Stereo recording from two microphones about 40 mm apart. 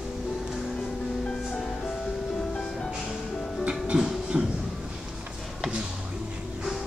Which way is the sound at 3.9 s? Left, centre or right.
Centre.